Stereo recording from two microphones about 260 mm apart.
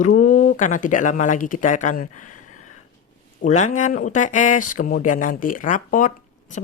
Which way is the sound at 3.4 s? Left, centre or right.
Left.